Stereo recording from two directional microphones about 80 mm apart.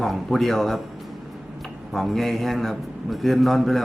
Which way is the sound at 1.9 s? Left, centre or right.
Centre.